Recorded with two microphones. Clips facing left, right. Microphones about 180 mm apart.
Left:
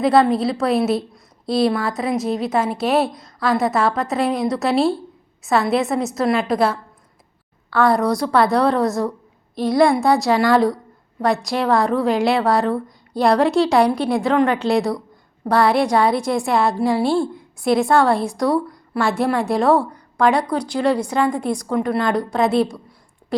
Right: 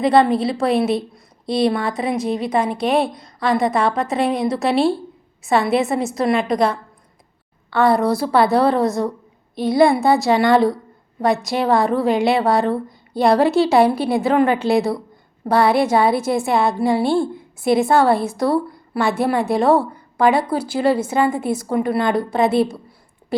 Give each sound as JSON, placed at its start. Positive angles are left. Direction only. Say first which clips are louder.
{"t": 0.0, "sound": "a woman's voice", "louder": "even", "side_deg": 0}